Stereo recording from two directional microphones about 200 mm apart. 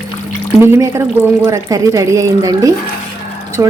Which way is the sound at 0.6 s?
15° right (ahead or behind).